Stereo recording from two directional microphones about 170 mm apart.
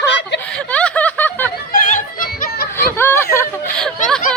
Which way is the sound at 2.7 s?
15° left (ahead or behind).